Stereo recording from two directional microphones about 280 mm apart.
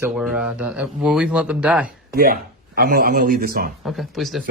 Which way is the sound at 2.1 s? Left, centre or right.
Right.